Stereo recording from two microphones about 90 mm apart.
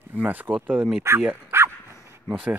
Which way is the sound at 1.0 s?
25° right (ahead or behind).